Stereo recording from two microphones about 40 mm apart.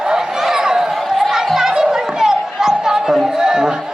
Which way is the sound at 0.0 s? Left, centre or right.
Centre.